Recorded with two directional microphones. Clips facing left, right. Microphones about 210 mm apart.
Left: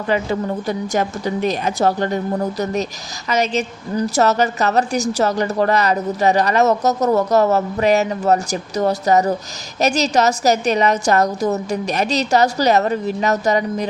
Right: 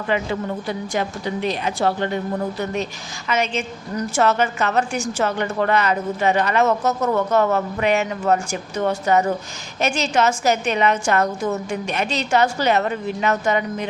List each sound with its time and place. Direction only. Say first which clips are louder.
0.1 s a woman's voice: left 3 dB; 40° left (ahead or behind)